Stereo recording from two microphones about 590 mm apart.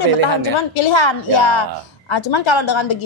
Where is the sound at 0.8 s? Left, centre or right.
Left.